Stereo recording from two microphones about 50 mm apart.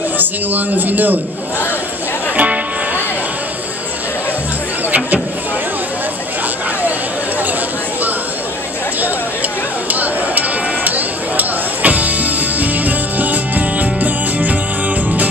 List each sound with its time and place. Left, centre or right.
0.2 s a man's voice: right
2.3 s music: right
9.8 s a sound: right